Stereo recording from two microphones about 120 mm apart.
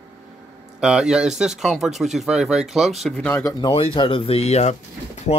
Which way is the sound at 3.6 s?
50° left (ahead or behind).